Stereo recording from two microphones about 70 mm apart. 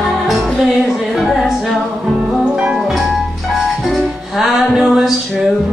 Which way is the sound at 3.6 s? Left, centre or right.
Centre.